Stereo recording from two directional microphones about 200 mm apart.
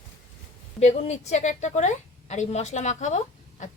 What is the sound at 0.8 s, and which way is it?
A woman's voice, 35° left (ahead or behind).